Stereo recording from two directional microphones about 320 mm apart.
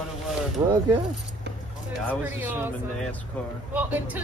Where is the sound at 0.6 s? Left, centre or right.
Centre.